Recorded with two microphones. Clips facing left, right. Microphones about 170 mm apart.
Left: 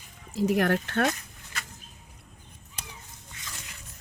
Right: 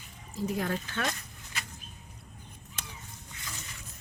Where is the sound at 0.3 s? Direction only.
80° left; by 1.1 s 60° left (ahead or behind).